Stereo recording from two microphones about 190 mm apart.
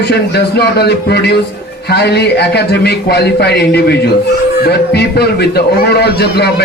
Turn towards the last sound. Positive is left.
turn(degrees=60)  # may be behind; listen again after turning